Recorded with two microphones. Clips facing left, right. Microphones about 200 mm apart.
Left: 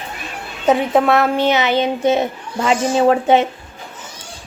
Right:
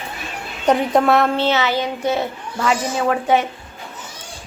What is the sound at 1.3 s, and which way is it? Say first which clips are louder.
A child's voice: left 3 dB; 15° left (ahead or behind).